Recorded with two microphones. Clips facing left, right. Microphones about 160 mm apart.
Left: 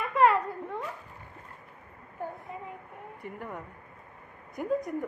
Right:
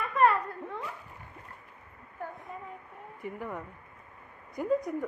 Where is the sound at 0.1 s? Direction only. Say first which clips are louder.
Left 2 dB; 20° left (ahead or behind).